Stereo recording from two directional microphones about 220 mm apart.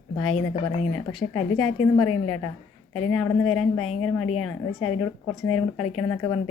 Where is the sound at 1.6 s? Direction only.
85° left.